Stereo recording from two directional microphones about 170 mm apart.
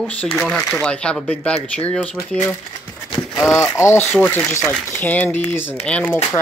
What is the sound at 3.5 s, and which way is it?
Speech, 15° left (ahead or behind).